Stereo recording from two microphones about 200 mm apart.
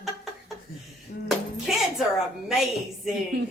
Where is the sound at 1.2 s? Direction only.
Centre (ahead or behind).